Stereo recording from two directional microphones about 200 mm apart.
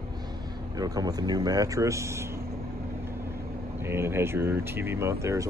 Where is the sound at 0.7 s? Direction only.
20° right (ahead or behind).